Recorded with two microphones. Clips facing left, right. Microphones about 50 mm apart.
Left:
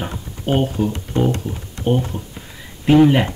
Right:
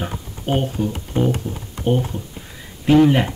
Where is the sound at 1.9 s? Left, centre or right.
Centre.